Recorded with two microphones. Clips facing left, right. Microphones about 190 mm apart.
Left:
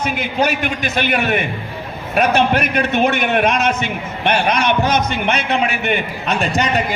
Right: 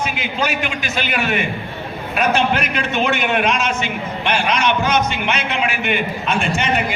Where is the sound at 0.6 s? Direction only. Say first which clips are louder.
Left 4 dB; 55° left (ahead or behind).